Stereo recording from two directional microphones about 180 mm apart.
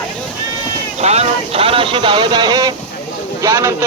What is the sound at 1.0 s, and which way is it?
A man's voice, 35° right (ahead or behind).